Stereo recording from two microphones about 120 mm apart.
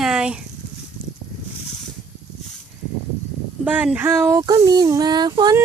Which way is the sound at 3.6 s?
10° right (ahead or behind).